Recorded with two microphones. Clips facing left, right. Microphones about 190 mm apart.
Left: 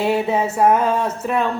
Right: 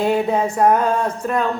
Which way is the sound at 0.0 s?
5° left (ahead or behind).